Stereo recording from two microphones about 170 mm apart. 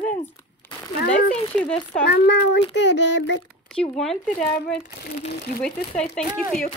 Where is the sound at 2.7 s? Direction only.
90° left.